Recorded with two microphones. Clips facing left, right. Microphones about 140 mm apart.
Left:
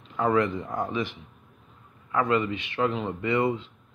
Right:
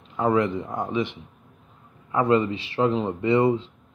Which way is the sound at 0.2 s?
20° right (ahead or behind).